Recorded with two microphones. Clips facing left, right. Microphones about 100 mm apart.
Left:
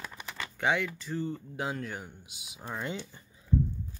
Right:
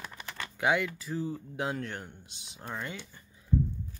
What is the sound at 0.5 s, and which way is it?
Speech, centre (ahead or behind).